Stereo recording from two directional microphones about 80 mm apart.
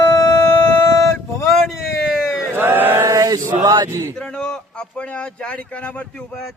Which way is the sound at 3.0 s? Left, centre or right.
Right.